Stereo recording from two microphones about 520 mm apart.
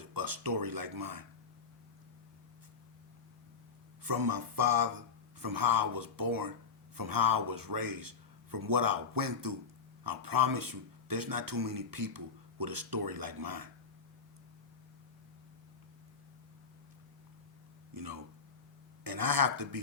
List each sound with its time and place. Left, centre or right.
0.0 s speech: right
4.0 s speech: right
17.9 s speech: right